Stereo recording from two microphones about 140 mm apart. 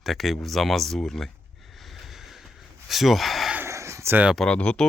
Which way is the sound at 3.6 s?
20° right (ahead or behind).